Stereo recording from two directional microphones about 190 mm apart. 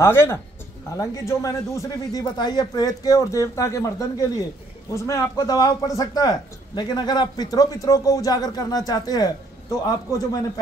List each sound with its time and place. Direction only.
0.0 s speech: 15° left (ahead or behind)
4.9 s a man's voice: 15° left (ahead or behind)